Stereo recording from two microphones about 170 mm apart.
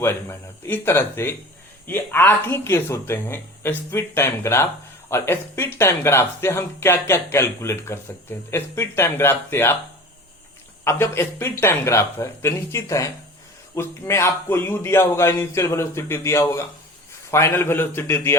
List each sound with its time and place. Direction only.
0.0 s speech: 15° left (ahead or behind)
10.8 s speech: 15° left (ahead or behind)